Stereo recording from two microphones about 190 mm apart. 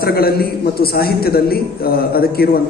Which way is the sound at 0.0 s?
55° left (ahead or behind).